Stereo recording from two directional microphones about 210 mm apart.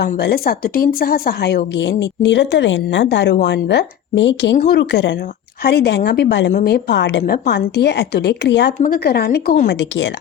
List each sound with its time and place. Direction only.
0.0 s a woman's voice: 50° left (ahead or behind)